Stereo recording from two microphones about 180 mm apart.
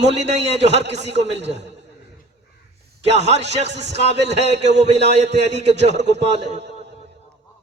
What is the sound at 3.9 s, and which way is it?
Speech, 70° right (ahead or behind).